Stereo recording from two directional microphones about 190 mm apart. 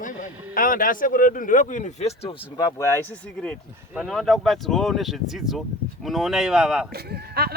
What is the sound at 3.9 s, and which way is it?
Speech, centre (ahead or behind).